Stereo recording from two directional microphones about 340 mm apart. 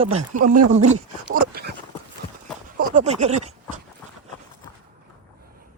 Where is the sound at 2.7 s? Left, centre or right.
Right.